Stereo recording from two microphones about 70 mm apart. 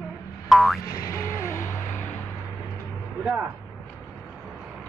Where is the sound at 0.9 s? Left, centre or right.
Left.